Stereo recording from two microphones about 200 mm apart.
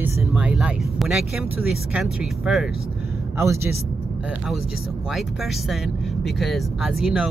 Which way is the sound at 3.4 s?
15° right (ahead or behind).